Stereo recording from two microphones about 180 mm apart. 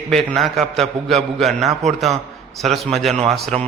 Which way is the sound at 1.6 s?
40° right (ahead or behind).